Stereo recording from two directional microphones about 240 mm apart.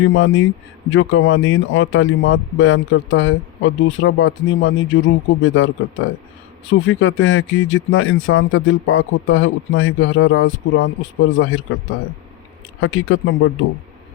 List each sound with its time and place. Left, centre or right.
0.0 s speech: left
12.8 s speech: left